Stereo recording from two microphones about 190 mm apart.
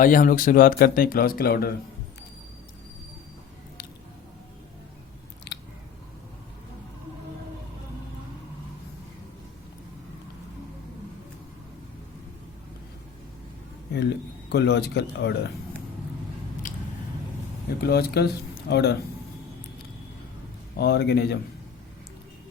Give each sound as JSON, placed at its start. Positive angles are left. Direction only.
{"t": 0.0, "sound": "speech", "side_deg": 45}
{"t": 5.5, "sound": "scissors", "side_deg": 60}
{"t": 13.9, "sound": "speech", "side_deg": 60}
{"t": 16.7, "sound": "squish", "side_deg": 45}
{"t": 17.7, "sound": "speech", "side_deg": 55}
{"t": 20.7, "sound": "speech", "side_deg": 60}